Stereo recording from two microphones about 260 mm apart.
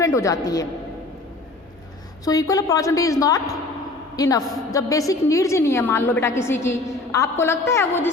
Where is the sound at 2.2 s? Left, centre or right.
Centre.